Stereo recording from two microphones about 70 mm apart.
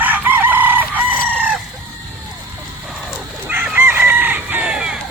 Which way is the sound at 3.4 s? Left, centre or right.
Right.